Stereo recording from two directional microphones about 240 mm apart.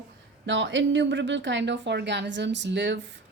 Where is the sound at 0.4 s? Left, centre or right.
Right.